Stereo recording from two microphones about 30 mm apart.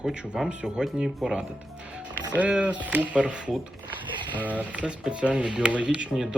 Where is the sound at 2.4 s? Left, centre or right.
Right.